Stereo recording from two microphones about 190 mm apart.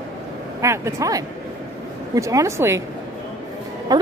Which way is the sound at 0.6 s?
15° right (ahead or behind).